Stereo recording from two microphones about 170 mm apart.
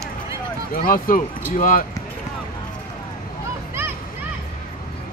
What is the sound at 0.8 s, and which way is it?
Clip-clop, 55° left (ahead or behind).